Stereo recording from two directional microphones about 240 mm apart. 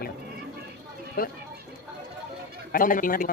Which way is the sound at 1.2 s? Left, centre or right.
Left.